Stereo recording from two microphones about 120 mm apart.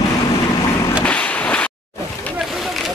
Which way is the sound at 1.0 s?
10° left (ahead or behind).